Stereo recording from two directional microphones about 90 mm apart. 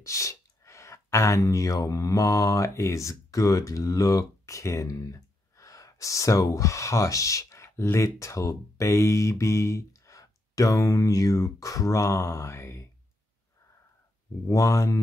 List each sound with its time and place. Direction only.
0.0 s speech: 35° left (ahead or behind)
14.5 s speech: 35° left (ahead or behind)